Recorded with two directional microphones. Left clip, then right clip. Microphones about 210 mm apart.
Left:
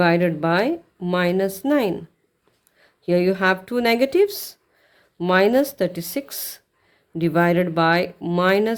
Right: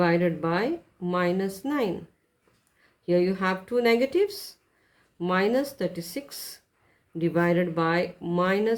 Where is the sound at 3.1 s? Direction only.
50° left (ahead or behind).